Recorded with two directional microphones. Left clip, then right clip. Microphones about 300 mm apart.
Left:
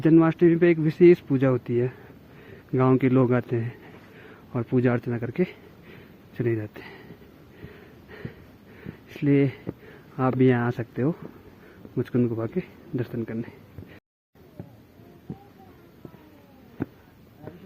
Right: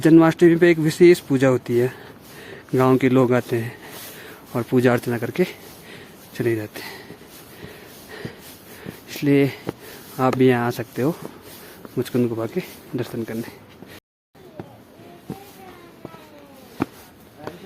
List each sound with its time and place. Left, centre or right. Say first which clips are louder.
0.0 s speech: right 5 dB; centre
9.0 s speech: right 4 dB; centre